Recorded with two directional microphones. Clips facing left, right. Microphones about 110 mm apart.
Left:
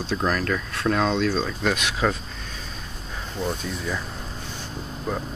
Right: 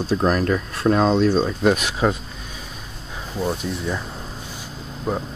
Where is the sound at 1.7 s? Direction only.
30° right (ahead or behind).